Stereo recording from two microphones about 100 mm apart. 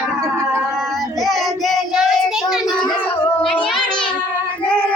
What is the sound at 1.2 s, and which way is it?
Child singing, centre (ahead or behind).